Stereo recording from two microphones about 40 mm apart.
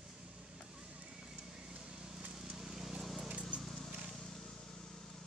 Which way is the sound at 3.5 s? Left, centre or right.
Right.